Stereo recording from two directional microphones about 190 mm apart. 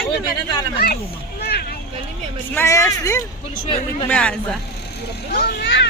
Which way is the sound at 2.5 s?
15° left (ahead or behind).